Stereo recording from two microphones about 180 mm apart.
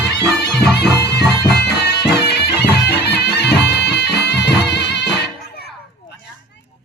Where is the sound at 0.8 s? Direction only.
65° left (ahead or behind).